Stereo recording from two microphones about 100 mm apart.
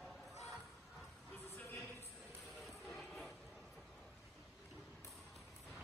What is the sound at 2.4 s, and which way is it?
Music, centre (ahead or behind).